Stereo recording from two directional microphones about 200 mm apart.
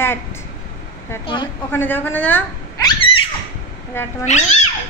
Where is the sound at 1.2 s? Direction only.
25° left (ahead or behind).